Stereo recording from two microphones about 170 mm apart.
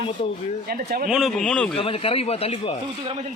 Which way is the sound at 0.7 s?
65° right (ahead or behind).